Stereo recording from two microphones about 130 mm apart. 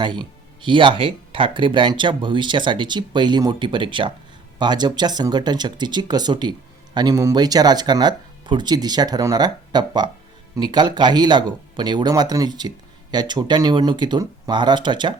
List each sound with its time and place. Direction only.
0.0 s speech: 35° right (ahead or behind)